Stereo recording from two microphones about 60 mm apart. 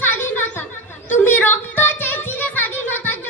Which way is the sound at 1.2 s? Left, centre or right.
Left.